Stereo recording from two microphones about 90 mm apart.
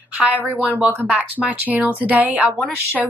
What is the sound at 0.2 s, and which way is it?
A woman's voice, 15° right (ahead or behind).